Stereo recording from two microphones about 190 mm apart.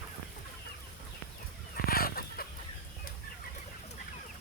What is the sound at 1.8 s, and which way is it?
Chicken, 50° left (ahead or behind).